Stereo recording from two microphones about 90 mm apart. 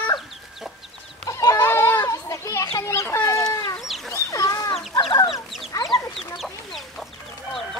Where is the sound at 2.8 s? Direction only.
30° left (ahead or behind).